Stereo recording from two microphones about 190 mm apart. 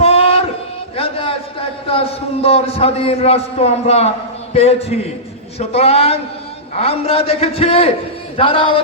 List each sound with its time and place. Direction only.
0.0 s a sound: 30° left (ahead or behind)
0.9 s a man's voice: 30° left (ahead or behind)
8.4 s music: 30° left (ahead or behind)